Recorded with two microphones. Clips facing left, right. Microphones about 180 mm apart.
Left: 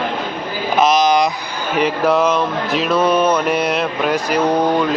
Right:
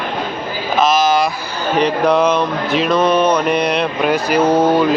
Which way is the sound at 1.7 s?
10° left (ahead or behind).